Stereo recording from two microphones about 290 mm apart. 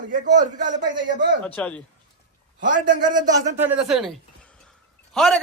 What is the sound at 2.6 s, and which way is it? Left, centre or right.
Speech, right.